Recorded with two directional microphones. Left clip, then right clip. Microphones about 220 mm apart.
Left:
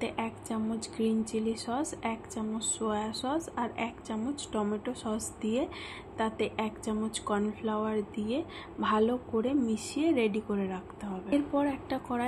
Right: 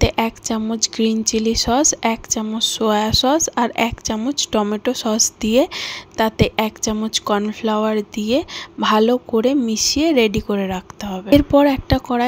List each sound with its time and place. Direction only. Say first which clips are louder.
0.0 s a woman's voice: right 16 dB; 45° right (ahead or behind)